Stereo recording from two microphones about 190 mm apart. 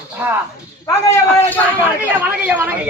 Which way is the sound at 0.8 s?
15° left (ahead or behind).